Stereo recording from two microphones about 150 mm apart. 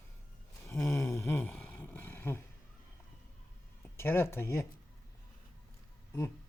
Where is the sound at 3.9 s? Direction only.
15° left (ahead or behind).